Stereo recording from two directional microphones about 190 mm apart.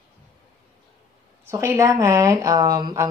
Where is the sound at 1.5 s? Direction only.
15° right (ahead or behind).